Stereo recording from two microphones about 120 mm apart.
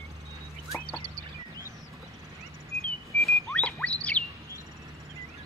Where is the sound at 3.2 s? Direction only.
10° left (ahead or behind).